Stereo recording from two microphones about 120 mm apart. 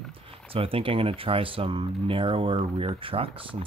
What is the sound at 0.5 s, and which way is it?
Speech, 50° right (ahead or behind).